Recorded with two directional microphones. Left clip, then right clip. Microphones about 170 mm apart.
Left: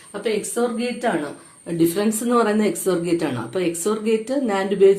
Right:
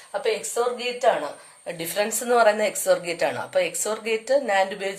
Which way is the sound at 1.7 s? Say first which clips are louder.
Left 6 dB; 35° right (ahead or behind).